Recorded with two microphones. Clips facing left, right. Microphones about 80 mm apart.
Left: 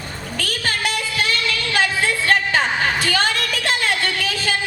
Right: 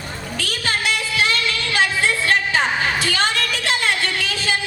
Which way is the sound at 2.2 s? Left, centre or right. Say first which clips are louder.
Left 3 dB; left.